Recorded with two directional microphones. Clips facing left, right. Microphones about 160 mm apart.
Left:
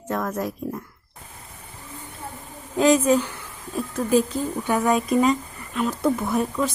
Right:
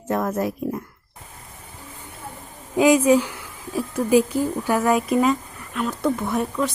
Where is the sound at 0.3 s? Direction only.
5° right (ahead or behind).